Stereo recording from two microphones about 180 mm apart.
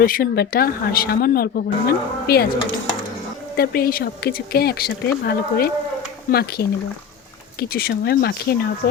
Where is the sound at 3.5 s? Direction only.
60° left (ahead or behind).